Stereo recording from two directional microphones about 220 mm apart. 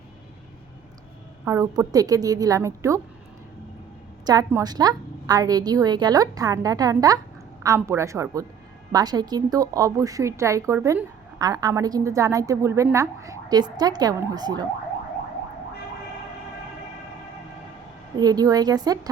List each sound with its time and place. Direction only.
1.5 s a woman's voice: 15° right (ahead or behind)
4.3 s a woman's voice: 15° right (ahead or behind)
18.2 s a woman's voice: 15° right (ahead or behind)